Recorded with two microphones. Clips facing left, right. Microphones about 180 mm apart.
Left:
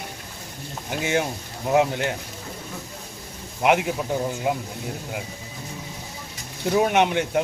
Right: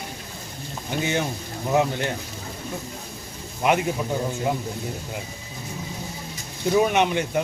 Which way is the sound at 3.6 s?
10° left (ahead or behind).